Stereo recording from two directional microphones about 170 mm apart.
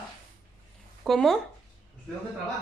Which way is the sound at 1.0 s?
Centre (ahead or behind).